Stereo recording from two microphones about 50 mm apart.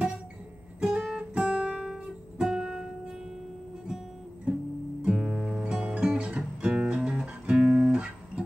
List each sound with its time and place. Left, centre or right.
0.7 s music: centre
1.7 s music: centre
5.0 s music: right